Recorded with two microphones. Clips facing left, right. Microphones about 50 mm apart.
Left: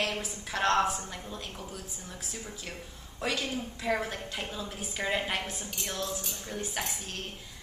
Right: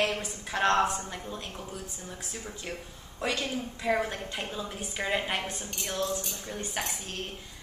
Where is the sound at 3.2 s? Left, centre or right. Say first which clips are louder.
Right 1 dB; centre.